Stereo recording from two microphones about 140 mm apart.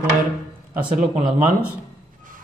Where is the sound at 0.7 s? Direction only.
10° right (ahead or behind).